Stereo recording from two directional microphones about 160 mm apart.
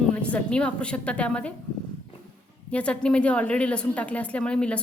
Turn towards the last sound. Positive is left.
turn(degrees=5)  # may be behind; listen again after turning